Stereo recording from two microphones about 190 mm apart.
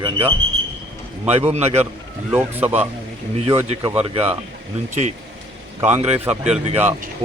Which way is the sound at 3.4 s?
35° right (ahead or behind).